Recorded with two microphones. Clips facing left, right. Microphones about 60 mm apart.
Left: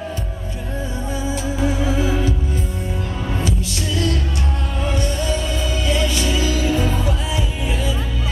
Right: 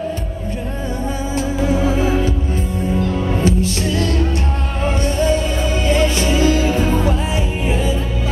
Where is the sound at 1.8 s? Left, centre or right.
Right.